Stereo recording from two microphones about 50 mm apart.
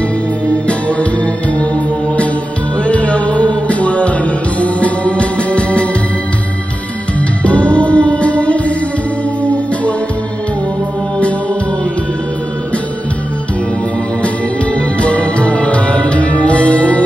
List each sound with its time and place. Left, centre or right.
0.5 s music: left
7.2 s music: left
14.2 s music: left